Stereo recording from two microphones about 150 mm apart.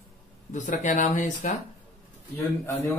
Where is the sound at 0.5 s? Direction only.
55° left (ahead or behind).